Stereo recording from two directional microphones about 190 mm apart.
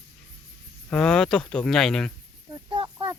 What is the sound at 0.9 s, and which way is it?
Speech, 5° left (ahead or behind).